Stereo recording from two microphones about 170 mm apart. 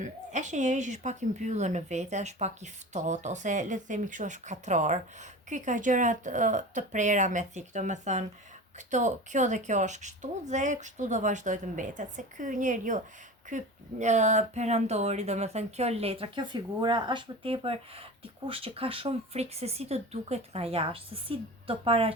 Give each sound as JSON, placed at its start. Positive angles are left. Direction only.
{"t": 0.0, "sound": "speech", "side_deg": -45}
{"t": 14.0, "sound": "speech", "side_deg": -45}